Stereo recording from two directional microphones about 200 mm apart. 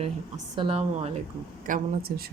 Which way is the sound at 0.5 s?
25° right (ahead or behind).